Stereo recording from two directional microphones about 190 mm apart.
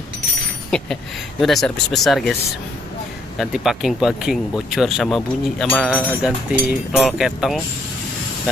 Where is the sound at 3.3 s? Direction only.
Centre (ahead or behind).